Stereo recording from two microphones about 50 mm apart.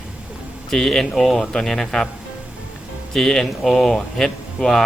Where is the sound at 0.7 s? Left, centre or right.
Centre.